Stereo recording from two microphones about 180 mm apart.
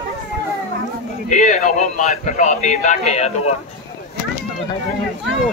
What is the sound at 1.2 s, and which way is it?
Speech, 45° left (ahead or behind).